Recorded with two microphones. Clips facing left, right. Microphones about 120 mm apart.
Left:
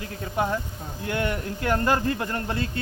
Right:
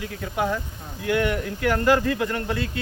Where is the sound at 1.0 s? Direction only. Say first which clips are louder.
Right 4 dB; 35° left (ahead or behind).